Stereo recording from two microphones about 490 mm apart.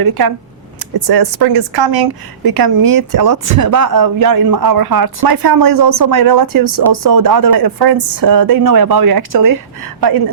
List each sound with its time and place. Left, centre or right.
0.0 s a woman's voice: right